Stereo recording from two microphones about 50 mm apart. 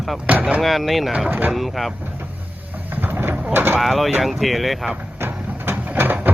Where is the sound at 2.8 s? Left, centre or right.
Right.